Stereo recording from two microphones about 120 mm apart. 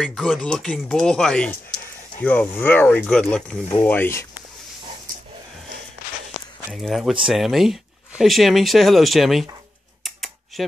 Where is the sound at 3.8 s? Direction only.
20° left (ahead or behind).